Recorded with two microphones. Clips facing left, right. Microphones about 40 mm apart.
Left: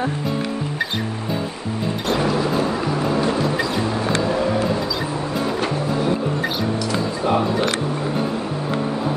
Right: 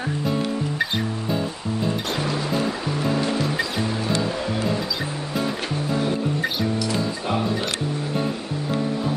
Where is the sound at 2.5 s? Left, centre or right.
Centre.